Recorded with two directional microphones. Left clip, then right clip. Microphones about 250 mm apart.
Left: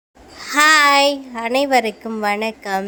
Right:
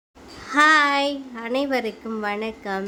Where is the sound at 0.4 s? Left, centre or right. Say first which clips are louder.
Left 4 dB; centre.